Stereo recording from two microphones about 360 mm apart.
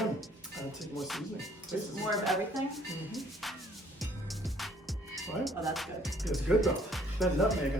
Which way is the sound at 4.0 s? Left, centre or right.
Centre.